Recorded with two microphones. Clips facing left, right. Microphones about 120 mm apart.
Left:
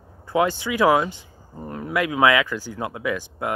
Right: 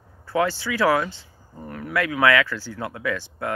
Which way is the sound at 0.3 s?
15° left (ahead or behind).